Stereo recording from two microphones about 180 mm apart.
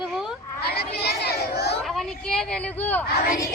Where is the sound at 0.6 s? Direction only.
60° left (ahead or behind).